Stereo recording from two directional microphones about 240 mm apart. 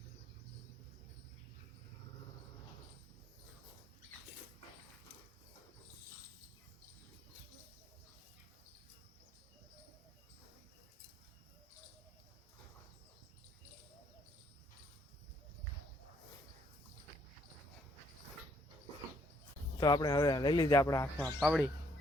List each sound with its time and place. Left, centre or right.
19.8 s speech: centre